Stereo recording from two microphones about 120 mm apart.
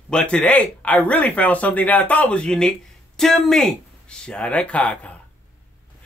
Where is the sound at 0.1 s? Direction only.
5° left (ahead or behind).